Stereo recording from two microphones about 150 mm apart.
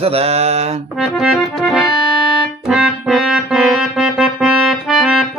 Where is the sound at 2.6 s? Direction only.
Centre (ahead or behind).